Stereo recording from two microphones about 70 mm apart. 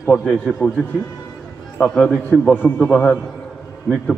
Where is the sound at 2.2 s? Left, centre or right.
Left.